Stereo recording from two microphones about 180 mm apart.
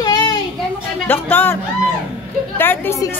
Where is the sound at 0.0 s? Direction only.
25° left (ahead or behind).